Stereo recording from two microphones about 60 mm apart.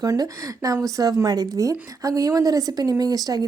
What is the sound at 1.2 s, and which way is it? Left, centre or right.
A woman's voice, right.